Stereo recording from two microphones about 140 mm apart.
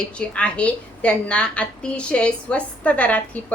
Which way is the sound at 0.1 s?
10° left (ahead or behind).